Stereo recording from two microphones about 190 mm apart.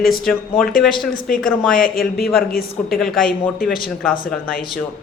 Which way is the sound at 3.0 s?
Centre (ahead or behind).